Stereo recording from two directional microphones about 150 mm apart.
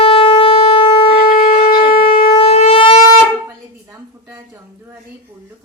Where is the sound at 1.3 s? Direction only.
70° left (ahead or behind).